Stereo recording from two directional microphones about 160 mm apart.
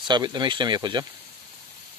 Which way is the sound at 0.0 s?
25° right (ahead or behind).